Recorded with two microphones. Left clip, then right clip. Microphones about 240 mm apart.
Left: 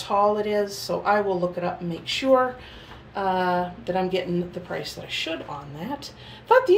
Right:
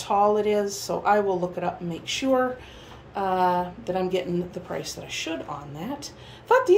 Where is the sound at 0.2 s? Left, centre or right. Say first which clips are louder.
Even; centre.